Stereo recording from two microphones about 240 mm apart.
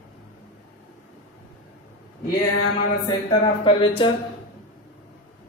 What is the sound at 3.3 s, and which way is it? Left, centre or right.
Speech, centre.